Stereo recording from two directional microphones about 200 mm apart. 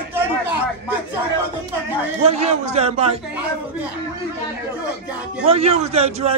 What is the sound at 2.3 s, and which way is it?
Speech, 30° right (ahead or behind).